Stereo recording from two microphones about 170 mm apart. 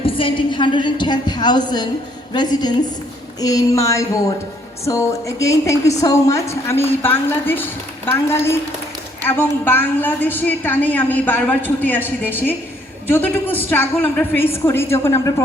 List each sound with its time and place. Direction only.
0.0 s a woman's voice: 30° left (ahead or behind)